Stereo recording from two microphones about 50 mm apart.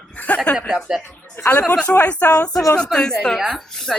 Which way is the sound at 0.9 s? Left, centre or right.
Centre.